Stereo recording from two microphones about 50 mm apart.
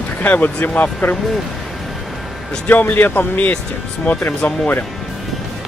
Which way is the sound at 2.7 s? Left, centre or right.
Left.